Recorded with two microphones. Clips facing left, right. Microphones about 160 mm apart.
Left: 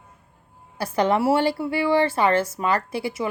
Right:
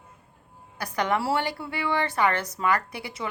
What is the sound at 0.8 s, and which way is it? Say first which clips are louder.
A woman's voice: left 6 dB; 25° left (ahead or behind).